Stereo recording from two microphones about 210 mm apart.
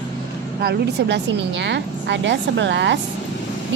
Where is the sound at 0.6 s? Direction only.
55° right (ahead or behind).